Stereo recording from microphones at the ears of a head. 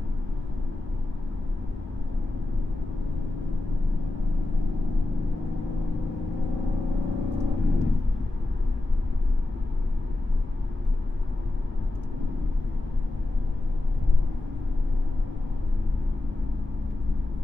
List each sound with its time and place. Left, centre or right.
6.6 s vehicle: left